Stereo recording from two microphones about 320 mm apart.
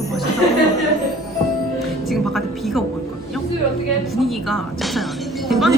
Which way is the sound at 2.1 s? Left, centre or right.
Centre.